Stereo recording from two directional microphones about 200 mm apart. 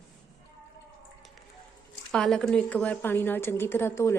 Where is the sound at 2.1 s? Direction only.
5° left (ahead or behind).